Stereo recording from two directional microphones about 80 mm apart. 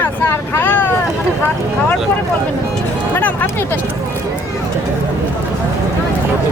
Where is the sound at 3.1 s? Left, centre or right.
Left.